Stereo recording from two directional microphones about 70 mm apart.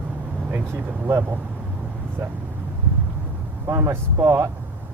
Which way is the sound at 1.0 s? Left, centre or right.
Right.